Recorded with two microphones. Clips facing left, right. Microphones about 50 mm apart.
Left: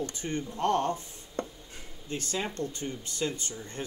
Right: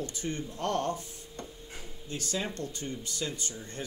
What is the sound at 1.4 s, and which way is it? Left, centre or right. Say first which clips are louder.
Writing: left 9 dB; left.